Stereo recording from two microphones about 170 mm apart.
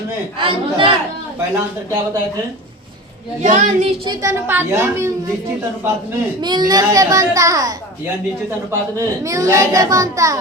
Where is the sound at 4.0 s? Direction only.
20° right (ahead or behind).